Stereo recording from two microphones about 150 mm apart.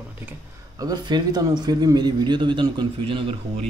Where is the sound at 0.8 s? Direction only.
25° right (ahead or behind).